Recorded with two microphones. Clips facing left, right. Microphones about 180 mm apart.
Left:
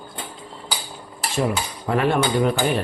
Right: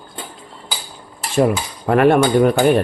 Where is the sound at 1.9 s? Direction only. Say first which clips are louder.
Right 7 dB; 60° right (ahead or behind).